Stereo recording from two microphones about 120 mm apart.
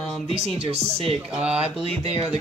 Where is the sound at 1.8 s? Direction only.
55° right (ahead or behind).